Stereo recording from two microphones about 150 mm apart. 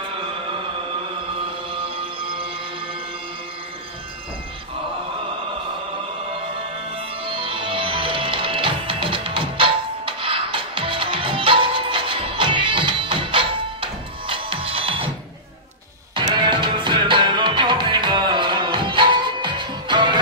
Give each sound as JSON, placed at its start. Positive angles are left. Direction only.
{"t": 7.0, "sound": "music", "side_deg": -35}
{"t": 16.2, "sound": "music", "side_deg": -30}